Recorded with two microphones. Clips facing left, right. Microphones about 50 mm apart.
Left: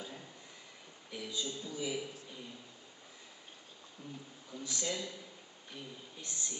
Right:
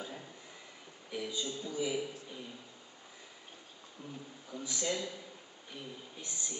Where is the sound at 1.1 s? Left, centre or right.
Centre.